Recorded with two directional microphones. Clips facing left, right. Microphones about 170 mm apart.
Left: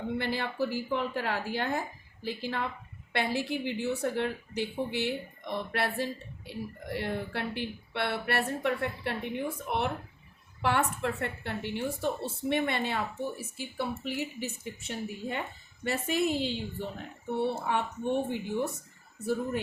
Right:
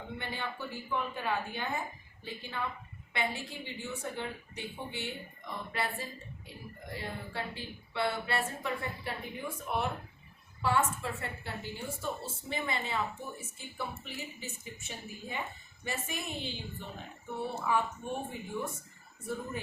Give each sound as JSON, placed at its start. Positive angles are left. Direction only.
{"t": 0.2, "sound": "a woman's voice", "side_deg": 80}